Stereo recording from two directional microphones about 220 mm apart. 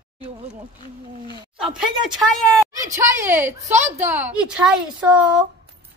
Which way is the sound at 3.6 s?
30° right (ahead or behind).